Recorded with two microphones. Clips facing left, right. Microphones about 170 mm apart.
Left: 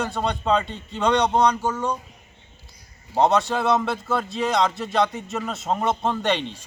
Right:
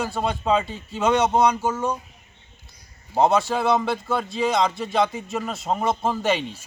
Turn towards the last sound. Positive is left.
turn(degrees=-5)  # may be behind; listen again after turning